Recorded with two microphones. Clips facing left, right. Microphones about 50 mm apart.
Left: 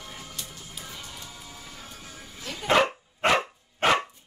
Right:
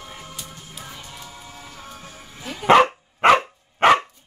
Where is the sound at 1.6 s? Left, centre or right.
Right.